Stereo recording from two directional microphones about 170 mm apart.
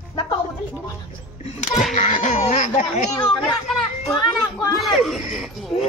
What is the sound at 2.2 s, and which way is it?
Speech, 45° left (ahead or behind).